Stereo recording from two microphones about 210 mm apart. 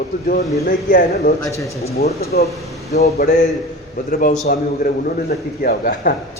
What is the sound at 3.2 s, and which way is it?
A man's voice, 40° left (ahead or behind).